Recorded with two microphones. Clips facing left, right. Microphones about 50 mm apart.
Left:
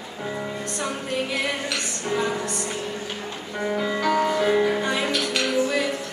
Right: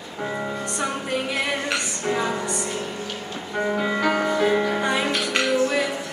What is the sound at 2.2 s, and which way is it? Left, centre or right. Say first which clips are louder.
Music: even; centre.